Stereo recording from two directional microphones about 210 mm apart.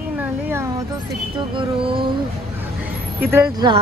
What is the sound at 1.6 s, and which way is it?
Music, 25° right (ahead or behind).